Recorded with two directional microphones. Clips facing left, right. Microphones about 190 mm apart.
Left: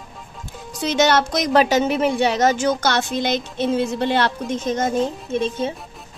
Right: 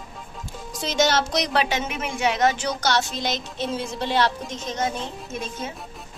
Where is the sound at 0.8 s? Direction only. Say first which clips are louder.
Left 4 dB; 60° left (ahead or behind).